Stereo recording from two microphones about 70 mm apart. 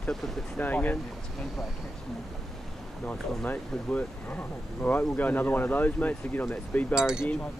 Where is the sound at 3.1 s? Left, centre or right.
Left.